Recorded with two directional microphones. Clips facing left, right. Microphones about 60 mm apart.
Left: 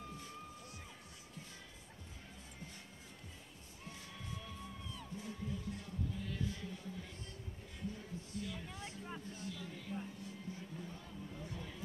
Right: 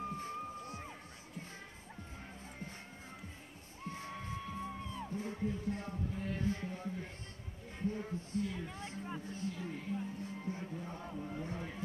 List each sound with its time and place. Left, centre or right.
0.0 s music: right
3.8 s music: right
7.8 s heart sounds: right
8.7 s vehicle: right
9.3 s music: right